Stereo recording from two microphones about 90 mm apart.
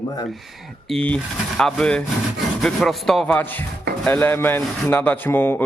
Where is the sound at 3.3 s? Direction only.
20° left (ahead or behind).